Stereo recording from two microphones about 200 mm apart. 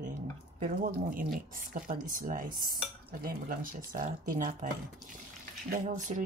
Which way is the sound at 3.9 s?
40° right (ahead or behind).